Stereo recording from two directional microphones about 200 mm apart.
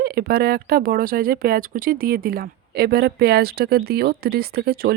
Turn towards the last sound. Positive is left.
turn(degrees=-50)  # may be behind; listen again after turning